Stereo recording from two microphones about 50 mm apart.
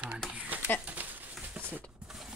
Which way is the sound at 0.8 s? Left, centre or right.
Right.